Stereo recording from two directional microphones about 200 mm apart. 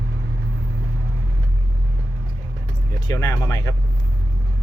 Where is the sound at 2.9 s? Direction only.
20° left (ahead or behind).